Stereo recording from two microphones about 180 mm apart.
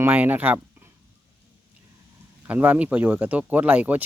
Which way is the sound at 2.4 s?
10° right (ahead or behind).